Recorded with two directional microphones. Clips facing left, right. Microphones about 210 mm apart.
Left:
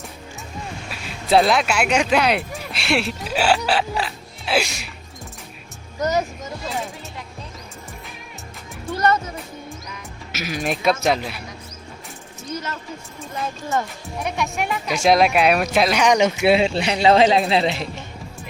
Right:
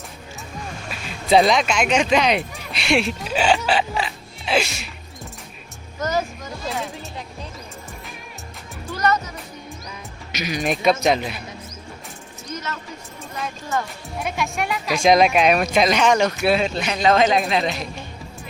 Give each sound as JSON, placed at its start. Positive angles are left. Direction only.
{"t": 0.9, "sound": "speech", "side_deg": 0}
{"t": 6.0, "sound": "speech", "side_deg": 20}
{"t": 8.9, "sound": "music", "side_deg": 30}
{"t": 10.3, "sound": "speech", "side_deg": 0}
{"t": 14.2, "sound": "speech", "side_deg": 0}
{"t": 16.0, "sound": "speech", "side_deg": 15}